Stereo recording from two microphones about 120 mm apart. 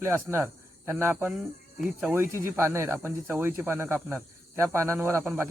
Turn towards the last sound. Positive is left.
turn(degrees=-20)  # may be behind; listen again after turning